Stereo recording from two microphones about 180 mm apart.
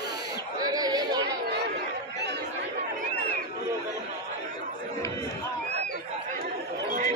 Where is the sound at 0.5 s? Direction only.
20° right (ahead or behind).